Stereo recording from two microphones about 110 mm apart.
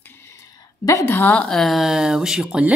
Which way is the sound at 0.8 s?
25° left (ahead or behind).